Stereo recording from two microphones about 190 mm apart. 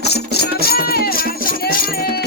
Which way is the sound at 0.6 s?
55° left (ahead or behind).